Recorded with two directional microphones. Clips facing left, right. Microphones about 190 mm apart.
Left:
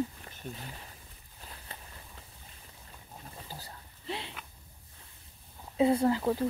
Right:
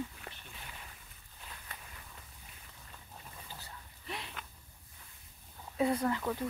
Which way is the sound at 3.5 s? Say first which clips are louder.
Left 4 dB; 35° left (ahead or behind).